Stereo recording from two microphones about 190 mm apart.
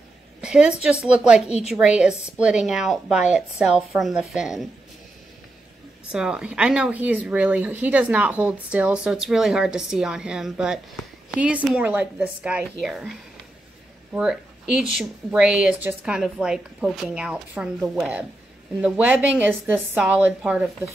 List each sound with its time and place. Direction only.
0.4 s a sound: 5° right (ahead or behind)
0.8 s a woman's voice: 5° right (ahead or behind)
6.1 s a woman's voice: 5° right (ahead or behind)
14.1 s a woman's voice: 5° right (ahead or behind)